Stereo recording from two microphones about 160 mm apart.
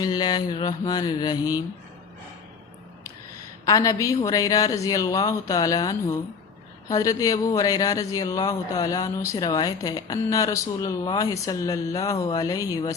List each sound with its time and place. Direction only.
0.0 s speech: 25° left (ahead or behind)
3.7 s speech: 20° left (ahead or behind)